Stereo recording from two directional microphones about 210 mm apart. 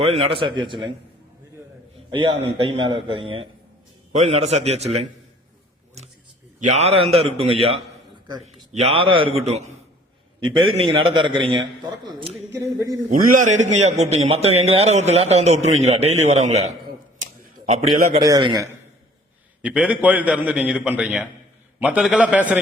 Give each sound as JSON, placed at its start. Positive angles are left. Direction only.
{"t": 0.0, "sound": "a man's voice", "side_deg": -30}
{"t": 2.0, "sound": "a man's voice", "side_deg": -25}
{"t": 6.6, "sound": "a man's voice", "side_deg": -30}
{"t": 10.5, "sound": "a man's voice", "side_deg": -25}
{"t": 13.1, "sound": "a man's voice", "side_deg": -40}
{"t": 18.2, "sound": "a man's voice", "side_deg": -20}
{"t": 19.6, "sound": "a man's voice", "side_deg": -5}